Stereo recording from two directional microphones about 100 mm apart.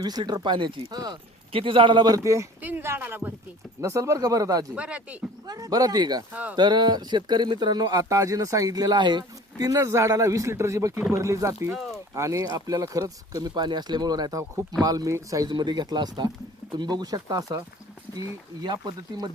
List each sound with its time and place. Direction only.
0.0 s speech: 40° right (ahead or behind)
1.5 s a man's voice: 60° right (ahead or behind)
2.1 s speech: 30° right (ahead or behind)
2.6 s speech: 20° right (ahead or behind)
3.8 s speech: 35° right (ahead or behind)
4.7 s speech: 10° right (ahead or behind)
5.5 s speech: 40° right (ahead or behind)
6.3 s speech: 15° right (ahead or behind)
6.6 s speech: 45° right (ahead or behind)
15.5 s speech: 45° right (ahead or behind)